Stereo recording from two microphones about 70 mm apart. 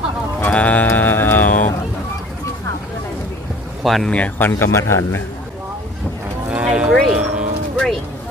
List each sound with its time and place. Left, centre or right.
0.4 s music: left
3.8 s speech: centre
4.1 s speech: left
4.4 s a man's voice: left
6.5 s music: centre